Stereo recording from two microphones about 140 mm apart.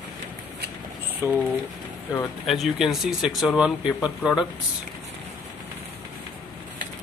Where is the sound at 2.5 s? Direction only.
Centre (ahead or behind).